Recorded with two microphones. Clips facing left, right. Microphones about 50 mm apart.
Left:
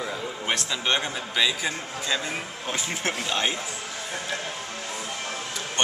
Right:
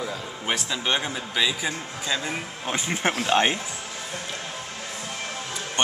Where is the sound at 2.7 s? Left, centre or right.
Right.